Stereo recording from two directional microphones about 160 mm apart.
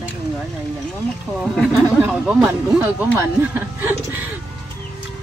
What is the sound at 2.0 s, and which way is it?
Speech, 10° right (ahead or behind).